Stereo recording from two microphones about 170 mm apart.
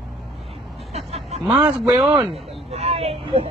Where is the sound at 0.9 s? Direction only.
40° right (ahead or behind).